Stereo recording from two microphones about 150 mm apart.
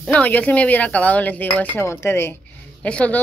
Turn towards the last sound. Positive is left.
turn(degrees=10)  # may be behind; listen again after turning